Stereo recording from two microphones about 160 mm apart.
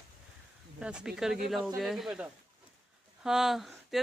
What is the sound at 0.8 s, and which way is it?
Speech, 5° right (ahead or behind).